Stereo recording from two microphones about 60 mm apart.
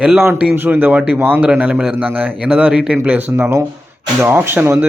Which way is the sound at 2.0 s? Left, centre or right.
Right.